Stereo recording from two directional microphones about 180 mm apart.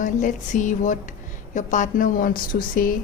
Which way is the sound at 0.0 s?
45° left (ahead or behind).